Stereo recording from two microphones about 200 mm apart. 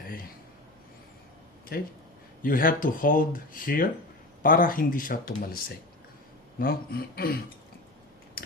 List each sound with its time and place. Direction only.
1.7 s speech: 50° left (ahead or behind)
6.6 s speech: 50° left (ahead or behind)
8.4 s a sound: 50° left (ahead or behind)